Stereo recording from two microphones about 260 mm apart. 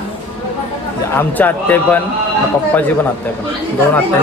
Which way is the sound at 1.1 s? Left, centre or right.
Centre.